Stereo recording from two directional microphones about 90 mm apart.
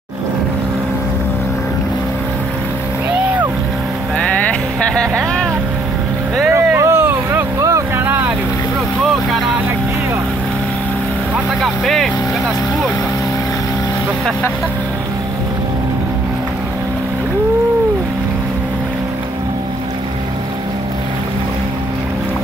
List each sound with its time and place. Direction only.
4.2 s vehicle: 10° left (ahead or behind)
6.5 s vehicle: 30° right (ahead or behind)
11.6 s speech: 5° left (ahead or behind)